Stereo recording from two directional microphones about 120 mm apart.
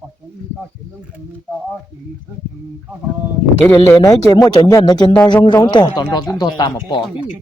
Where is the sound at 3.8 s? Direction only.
25° left (ahead or behind).